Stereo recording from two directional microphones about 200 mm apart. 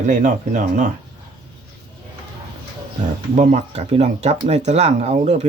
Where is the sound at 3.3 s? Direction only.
35° right (ahead or behind).